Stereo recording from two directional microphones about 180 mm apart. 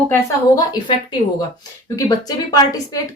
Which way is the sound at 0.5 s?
20° left (ahead or behind).